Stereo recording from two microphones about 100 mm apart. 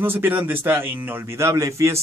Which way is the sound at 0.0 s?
20° right (ahead or behind).